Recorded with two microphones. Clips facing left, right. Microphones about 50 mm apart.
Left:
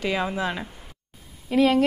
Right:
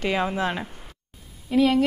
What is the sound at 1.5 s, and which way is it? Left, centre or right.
Speech, left.